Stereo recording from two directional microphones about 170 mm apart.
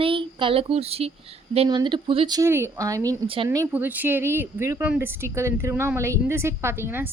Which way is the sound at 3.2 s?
30° right (ahead or behind).